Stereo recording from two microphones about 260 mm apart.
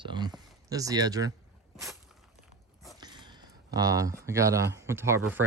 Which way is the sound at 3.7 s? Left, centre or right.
Centre.